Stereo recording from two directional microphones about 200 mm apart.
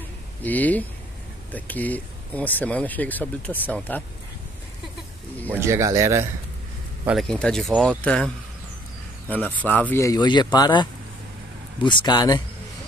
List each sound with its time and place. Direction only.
0.4 s speech: 10° left (ahead or behind)
5.5 s speech: 15° right (ahead or behind)
7.1 s speech: centre (ahead or behind)
9.3 s speech: 10° left (ahead or behind)